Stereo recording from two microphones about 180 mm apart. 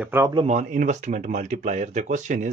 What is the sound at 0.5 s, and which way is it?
Speech, 45° right (ahead or behind).